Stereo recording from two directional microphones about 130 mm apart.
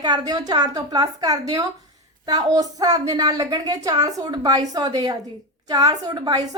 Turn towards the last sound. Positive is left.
turn(degrees=-30)  # may be behind; listen again after turning